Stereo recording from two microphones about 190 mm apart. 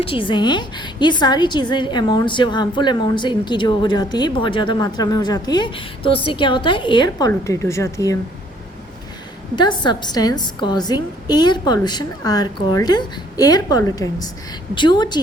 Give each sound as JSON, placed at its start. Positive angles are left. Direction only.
{"t": 0.0, "sound": "a woman's voice", "side_deg": 25}
{"t": 9.6, "sound": "a woman's voice", "side_deg": 25}